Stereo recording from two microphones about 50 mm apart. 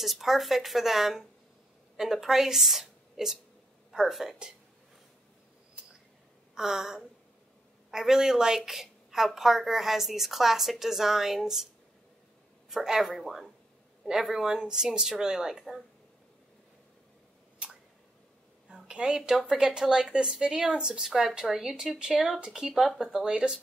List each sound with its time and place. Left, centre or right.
0.0 s a woman's voice: centre
6.5 s a woman's voice: centre
12.6 s a woman's voice: centre
18.7 s a woman's voice: centre